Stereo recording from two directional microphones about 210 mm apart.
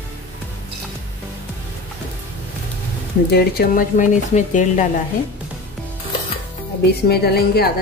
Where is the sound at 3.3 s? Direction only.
45° left (ahead or behind).